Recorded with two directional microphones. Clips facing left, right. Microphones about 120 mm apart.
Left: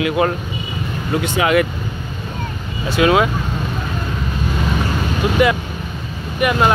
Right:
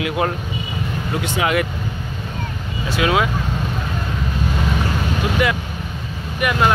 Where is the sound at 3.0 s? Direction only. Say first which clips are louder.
Left 4 dB; 45° left (ahead or behind).